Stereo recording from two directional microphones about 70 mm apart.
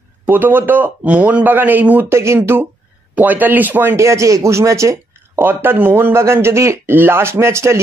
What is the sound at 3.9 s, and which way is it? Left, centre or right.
Speech, right.